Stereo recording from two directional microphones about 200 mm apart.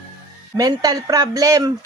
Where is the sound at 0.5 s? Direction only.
20° right (ahead or behind).